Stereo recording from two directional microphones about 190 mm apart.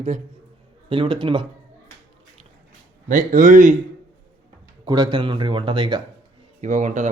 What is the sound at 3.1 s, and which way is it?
Speech, 45° right (ahead or behind).